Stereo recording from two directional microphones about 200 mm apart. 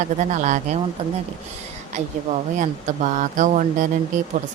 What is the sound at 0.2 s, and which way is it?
Speech, 35° right (ahead or behind).